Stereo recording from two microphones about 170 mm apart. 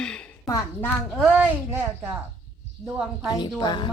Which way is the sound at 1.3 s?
10° right (ahead or behind).